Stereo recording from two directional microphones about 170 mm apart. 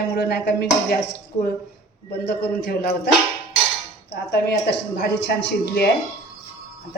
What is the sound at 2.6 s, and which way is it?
Speech, 70° left (ahead or behind).